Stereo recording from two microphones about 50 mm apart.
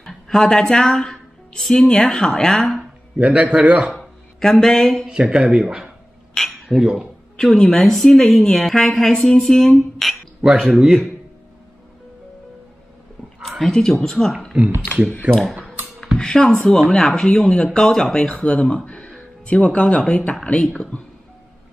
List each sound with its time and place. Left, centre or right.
0.0 s a sound: centre
1.6 s a woman's voice: centre
3.2 s a man's voice: right
4.0 s a sound: centre
5.0 s speech: centre
6.3 s cutlery: centre
6.8 s speech: centre
7.3 s a woman's voice: centre
10.4 s speech: centre
13.7 s a woman's voice: centre
15.3 s a man's voice: right
16.2 s a woman's voice: centre
18.3 s a woman's voice: left